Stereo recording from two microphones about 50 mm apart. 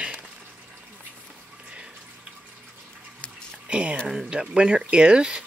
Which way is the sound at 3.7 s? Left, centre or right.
Right.